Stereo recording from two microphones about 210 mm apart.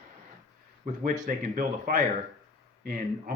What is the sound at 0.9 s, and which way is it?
Speech, 40° right (ahead or behind).